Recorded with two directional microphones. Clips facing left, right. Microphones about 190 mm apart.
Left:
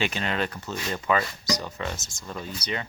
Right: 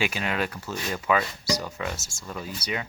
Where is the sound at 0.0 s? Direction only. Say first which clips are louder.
Even; 10° right (ahead or behind).